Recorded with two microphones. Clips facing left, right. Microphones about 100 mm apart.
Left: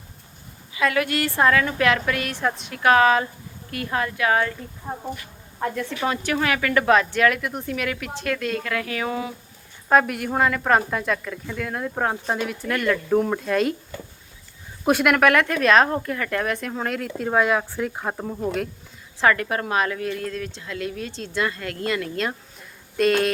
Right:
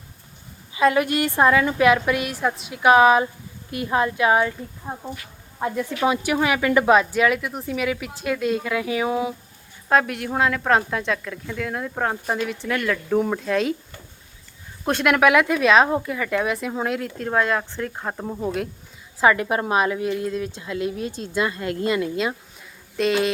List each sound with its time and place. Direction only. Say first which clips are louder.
0.7 s a woman's voice: right 4 dB; 25° right (ahead or behind); by 2.7 s 5° right (ahead or behind)
2.7 s a woman's voice: right 3 dB; 15° right (ahead or behind)
9.9 s speech: left 1 dB; centre (ahead or behind)
14.8 s speech: left 2 dB; 10° left (ahead or behind)
15.1 s speech: right 1 dB; 5° right (ahead or behind)
18.3 s a woman's voice: right 2 dB; 10° right (ahead or behind)
23.0 s speech: left 1 dB; centre (ahead or behind)